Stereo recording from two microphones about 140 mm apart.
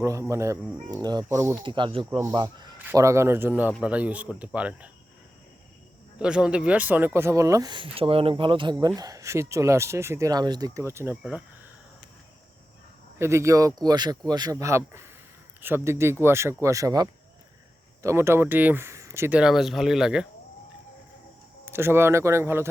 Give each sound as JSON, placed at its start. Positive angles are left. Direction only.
{"t": 0.0, "sound": "speech", "side_deg": -20}
{"t": 1.6, "sound": "speech", "side_deg": -35}
{"t": 2.0, "sound": "speech", "side_deg": -20}
{"t": 2.3, "sound": "speech", "side_deg": -35}
{"t": 2.8, "sound": "speech", "side_deg": -20}
{"t": 6.1, "sound": "speech", "side_deg": -5}
{"t": 13.1, "sound": "speech", "side_deg": -20}
{"t": 19.4, "sound": "speech", "side_deg": -5}
{"t": 21.6, "sound": "speech", "side_deg": -15}